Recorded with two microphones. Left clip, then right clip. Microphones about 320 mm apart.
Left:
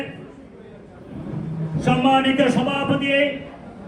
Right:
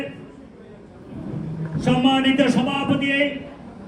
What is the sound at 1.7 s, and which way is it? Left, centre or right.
A man's voice, centre.